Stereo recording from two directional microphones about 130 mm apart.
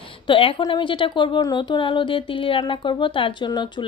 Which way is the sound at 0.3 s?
40° left (ahead or behind).